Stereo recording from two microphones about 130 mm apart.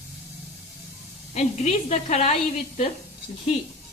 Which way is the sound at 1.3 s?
60° left (ahead or behind).